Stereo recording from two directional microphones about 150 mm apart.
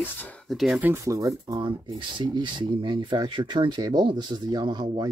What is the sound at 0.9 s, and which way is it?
Speech, 20° right (ahead or behind).